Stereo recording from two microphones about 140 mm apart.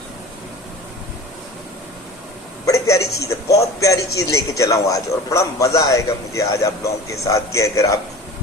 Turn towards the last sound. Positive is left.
turn(degrees=25)  # may be behind; listen again after turning